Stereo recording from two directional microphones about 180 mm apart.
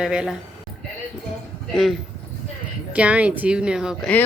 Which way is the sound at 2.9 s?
5° right (ahead or behind).